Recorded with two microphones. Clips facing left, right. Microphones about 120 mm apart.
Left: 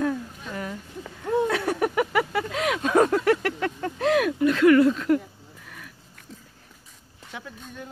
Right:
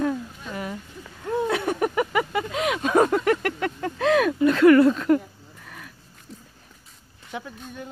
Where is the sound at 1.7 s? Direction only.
Centre (ahead or behind).